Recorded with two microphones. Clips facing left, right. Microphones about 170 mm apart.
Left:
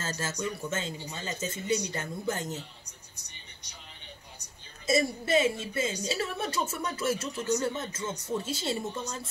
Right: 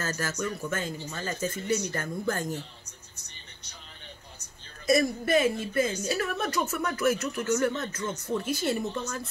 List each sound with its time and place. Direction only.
0.0 s speech: 25° left (ahead or behind)
4.8 s speech: 25° left (ahead or behind)
7.4 s speech: 15° left (ahead or behind)